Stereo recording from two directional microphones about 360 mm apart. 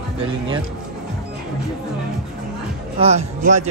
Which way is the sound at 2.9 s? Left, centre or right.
Centre.